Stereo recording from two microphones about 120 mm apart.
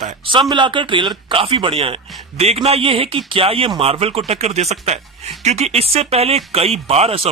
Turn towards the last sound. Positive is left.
turn(degrees=-55)  # may be behind; listen again after turning